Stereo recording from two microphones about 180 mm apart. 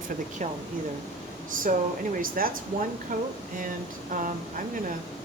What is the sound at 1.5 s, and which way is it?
Speech, 50° right (ahead or behind).